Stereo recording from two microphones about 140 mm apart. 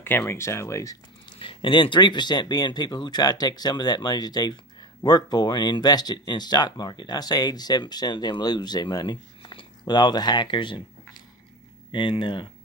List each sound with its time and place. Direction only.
0.0 s speech: 15° left (ahead or behind)
1.4 s speech: 40° left (ahead or behind)
11.9 s speech: 35° left (ahead or behind)